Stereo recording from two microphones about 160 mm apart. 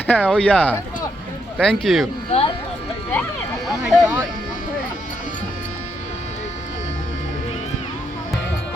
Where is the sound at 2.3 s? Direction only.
40° left (ahead or behind).